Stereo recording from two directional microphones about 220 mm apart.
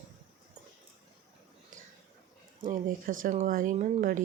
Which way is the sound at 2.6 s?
40° right (ahead or behind).